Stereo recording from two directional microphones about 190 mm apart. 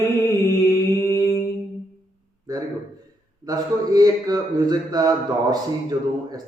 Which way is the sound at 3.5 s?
20° right (ahead or behind).